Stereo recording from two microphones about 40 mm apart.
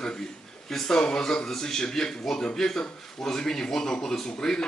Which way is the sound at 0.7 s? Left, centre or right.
Centre.